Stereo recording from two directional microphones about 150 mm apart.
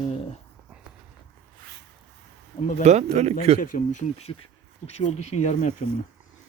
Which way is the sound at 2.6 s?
55° left (ahead or behind).